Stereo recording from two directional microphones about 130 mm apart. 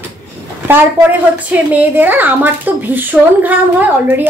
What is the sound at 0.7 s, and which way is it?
A woman's voice, 15° right (ahead or behind).